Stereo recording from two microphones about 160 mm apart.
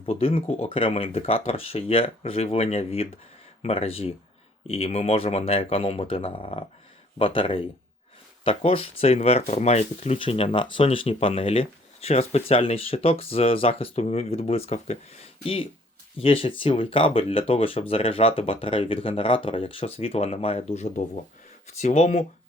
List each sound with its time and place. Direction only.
0.0 s speech: 35° left (ahead or behind)